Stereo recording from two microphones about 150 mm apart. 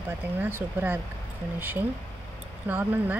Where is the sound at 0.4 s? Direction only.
15° right (ahead or behind).